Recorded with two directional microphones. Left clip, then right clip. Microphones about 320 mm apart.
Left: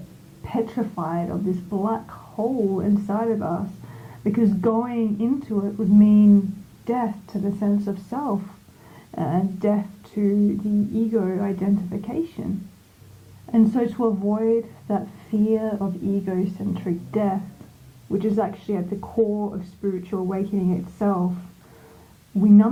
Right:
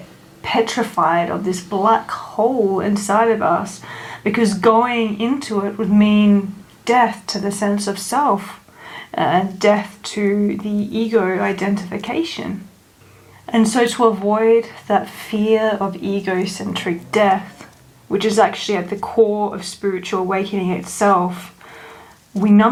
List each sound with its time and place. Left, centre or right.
0.4 s speech: centre
15.9 s speech: right
16.2 s speech: centre